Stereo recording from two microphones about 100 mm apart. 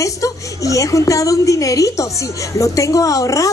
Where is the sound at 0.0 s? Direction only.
35° left (ahead or behind).